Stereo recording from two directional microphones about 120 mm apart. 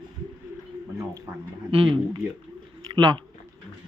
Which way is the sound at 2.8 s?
35° right (ahead or behind).